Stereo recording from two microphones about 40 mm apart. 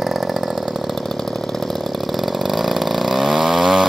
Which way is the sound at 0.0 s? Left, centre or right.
Centre.